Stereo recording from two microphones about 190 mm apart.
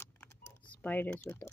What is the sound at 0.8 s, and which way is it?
Speech, 10° left (ahead or behind).